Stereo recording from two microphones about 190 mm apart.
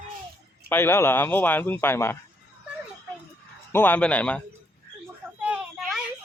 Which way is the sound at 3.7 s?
10° left (ahead or behind).